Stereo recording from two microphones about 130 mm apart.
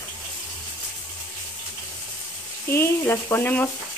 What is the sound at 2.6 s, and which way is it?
Frying, 20° left (ahead or behind).